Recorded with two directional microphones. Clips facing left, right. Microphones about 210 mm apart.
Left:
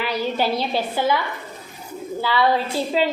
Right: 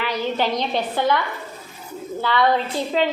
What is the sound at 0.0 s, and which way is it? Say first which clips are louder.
A woman's voice: even; 10° left (ahead or behind).